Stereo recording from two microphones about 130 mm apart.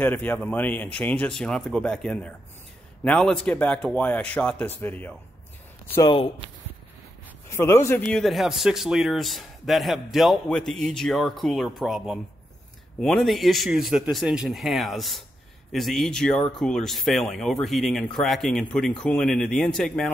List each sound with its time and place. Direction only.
0.0 s speech: 15° left (ahead or behind)
6.0 s speech: 40° left (ahead or behind)
7.4 s speech: 20° left (ahead or behind)
8.1 s a man's voice: centre (ahead or behind)